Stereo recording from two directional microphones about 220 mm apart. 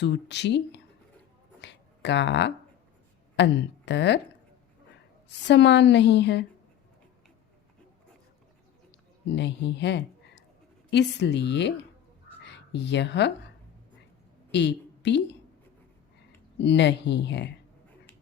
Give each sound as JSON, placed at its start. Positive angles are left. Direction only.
{"t": 0.0, "sound": "a woman's voice", "side_deg": 50}
{"t": 1.6, "sound": "a sound", "side_deg": 50}
{"t": 3.3, "sound": "a woman's voice", "side_deg": 50}
{"t": 5.5, "sound": "a woman's voice", "side_deg": 55}
{"t": 9.3, "sound": "a woman's voice", "side_deg": 55}
{"t": 14.5, "sound": "a woman's voice", "side_deg": 50}
{"t": 16.6, "sound": "a woman's voice", "side_deg": 50}